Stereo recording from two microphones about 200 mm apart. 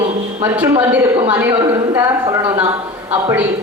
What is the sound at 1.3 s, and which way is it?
Speech, 10° right (ahead or behind).